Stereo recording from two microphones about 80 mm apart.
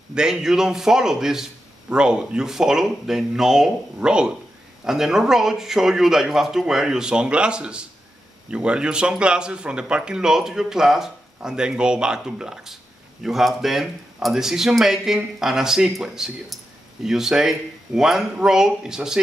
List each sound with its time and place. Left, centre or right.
0.1 s speech: centre